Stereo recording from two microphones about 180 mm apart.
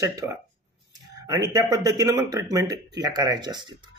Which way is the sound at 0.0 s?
20° right (ahead or behind).